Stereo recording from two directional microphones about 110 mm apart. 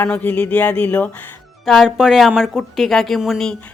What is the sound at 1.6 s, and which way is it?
Speech, centre (ahead or behind).